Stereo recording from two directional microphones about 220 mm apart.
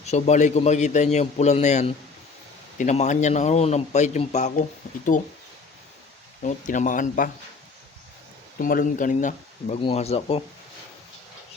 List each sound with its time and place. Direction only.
0.0 s a man's voice: 30° left (ahead or behind)
6.4 s a man's voice: 35° left (ahead or behind)
8.5 s a man's voice: 40° left (ahead or behind)